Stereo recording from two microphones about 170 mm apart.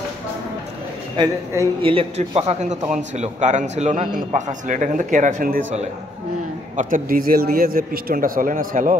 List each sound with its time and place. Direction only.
1.1 s a man's voice: 20° right (ahead or behind)
1.8 s a man's voice: 30° right (ahead or behind); by 5.6 s 55° right (ahead or behind)
6.8 s a man's voice: 55° right (ahead or behind)